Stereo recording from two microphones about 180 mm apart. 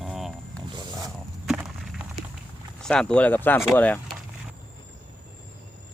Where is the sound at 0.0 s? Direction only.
Centre (ahead or behind).